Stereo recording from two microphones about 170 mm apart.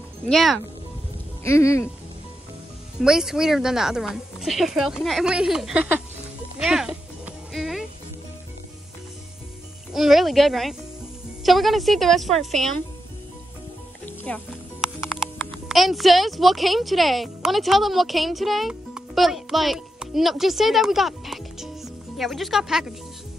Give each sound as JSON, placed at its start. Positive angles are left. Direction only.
{"t": 0.3, "sound": "speech", "side_deg": 0}
{"t": 1.4, "sound": "speech", "side_deg": 15}
{"t": 3.0, "sound": "speech", "side_deg": -5}
{"t": 6.6, "sound": "music", "side_deg": -5}
{"t": 9.9, "sound": "speech", "side_deg": 0}
{"t": 14.0, "sound": "music", "side_deg": 10}
{"t": 15.7, "sound": "speech", "side_deg": 0}